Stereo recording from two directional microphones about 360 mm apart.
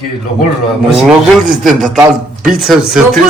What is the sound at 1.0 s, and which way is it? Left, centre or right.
A man's voice, centre.